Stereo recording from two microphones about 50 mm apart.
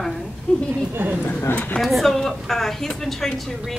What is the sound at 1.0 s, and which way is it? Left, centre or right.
Speech, right.